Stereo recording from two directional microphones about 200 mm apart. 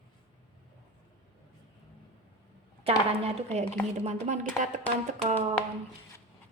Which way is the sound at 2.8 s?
30° right (ahead or behind).